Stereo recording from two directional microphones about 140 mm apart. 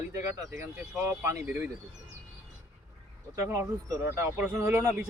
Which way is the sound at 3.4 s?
20° right (ahead or behind).